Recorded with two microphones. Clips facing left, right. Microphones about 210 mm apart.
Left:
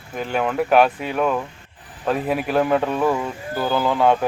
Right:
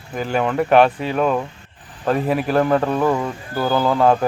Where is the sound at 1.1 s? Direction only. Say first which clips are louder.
Right 2 dB; 25° right (ahead or behind).